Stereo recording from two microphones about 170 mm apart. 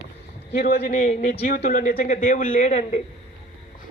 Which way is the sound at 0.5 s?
60° left (ahead or behind).